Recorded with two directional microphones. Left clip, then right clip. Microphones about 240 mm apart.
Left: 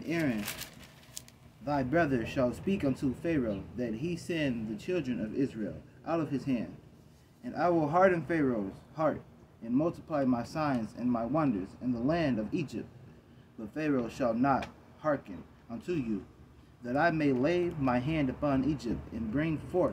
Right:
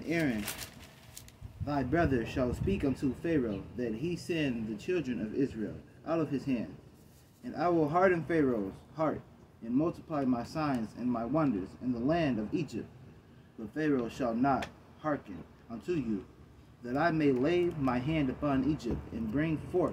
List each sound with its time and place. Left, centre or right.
0.0 s speech: left
1.6 s speech: left